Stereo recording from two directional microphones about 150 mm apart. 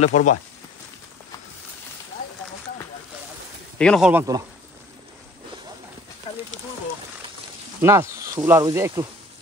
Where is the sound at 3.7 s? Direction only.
5° left (ahead or behind).